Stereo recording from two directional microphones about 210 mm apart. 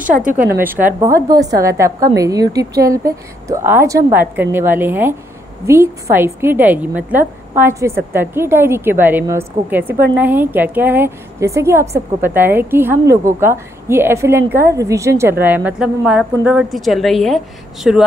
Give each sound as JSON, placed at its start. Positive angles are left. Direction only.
{"t": 0.0, "sound": "a woman's voice", "side_deg": -40}
{"t": 0.7, "sound": "a woman's voice", "side_deg": -10}